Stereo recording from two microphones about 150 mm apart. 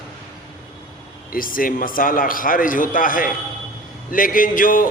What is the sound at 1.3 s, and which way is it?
A man's voice, 70° left (ahead or behind).